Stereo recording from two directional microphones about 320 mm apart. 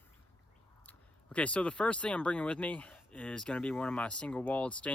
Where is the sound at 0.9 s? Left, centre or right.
Centre.